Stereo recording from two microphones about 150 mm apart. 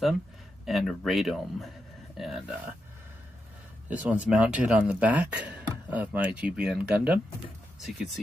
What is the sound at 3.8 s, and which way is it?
Speech, 10° right (ahead or behind).